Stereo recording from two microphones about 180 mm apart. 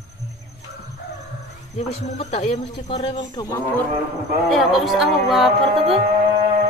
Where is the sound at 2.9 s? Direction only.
25° left (ahead or behind).